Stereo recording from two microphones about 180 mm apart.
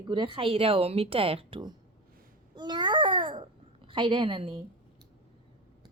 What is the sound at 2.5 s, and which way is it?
Babbling, 25° right (ahead or behind).